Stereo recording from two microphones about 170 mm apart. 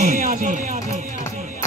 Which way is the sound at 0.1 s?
55° right (ahead or behind).